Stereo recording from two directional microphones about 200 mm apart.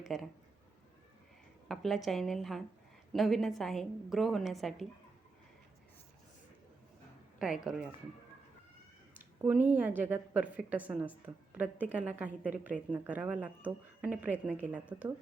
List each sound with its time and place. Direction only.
0.0 s speech: centre (ahead or behind)
1.6 s a woman's voice: centre (ahead or behind)
7.3 s a woman's voice: centre (ahead or behind)
9.1 s a sound: 10° right (ahead or behind)
9.7 s a woman's voice: 10° right (ahead or behind)